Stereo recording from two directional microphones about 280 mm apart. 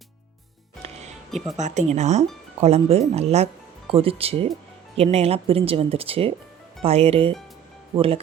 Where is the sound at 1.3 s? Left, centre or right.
Centre.